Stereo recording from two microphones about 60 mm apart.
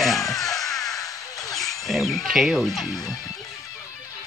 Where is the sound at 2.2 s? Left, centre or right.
Centre.